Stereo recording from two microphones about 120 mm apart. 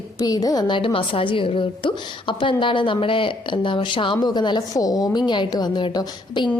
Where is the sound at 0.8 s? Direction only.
45° left (ahead or behind).